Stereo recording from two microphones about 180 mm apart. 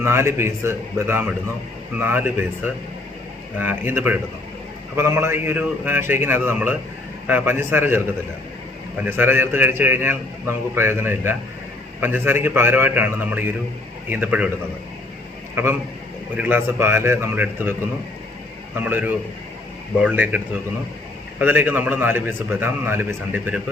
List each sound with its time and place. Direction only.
0.0 s a man's voice: 15° right (ahead or behind)
3.6 s a man's voice: 10° right (ahead or behind)
9.0 s a man's voice: 10° right (ahead or behind)
15.6 s a man's voice: 15° right (ahead or behind)
18.8 s a man's voice: 10° right (ahead or behind)